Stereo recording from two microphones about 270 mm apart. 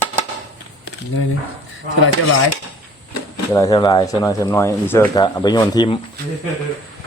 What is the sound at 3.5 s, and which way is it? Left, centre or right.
Speech, centre.